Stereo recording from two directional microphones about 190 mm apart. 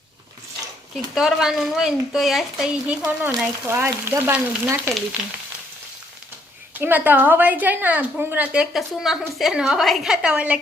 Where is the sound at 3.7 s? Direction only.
15° right (ahead or behind).